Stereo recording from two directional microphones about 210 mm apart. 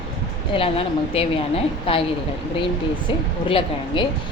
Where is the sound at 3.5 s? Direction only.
25° left (ahead or behind).